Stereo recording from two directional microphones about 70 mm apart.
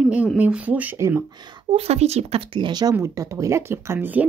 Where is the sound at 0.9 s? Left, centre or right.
Right.